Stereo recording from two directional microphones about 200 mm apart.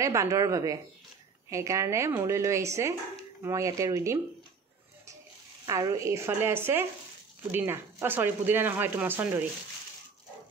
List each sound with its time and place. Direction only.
0.0 s speech: 15° right (ahead or behind)
5.7 s speech: 15° right (ahead or behind)